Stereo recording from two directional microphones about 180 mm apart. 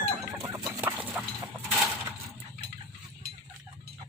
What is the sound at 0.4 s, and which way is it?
Chicken, 25° right (ahead or behind).